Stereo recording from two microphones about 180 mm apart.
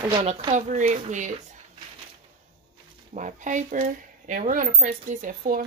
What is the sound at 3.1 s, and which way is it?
Speech, 45° right (ahead or behind).